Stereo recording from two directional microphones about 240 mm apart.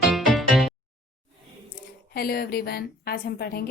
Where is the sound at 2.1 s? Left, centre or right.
Left.